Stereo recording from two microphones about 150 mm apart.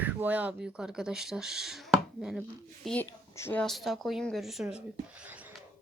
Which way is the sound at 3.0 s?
20° left (ahead or behind).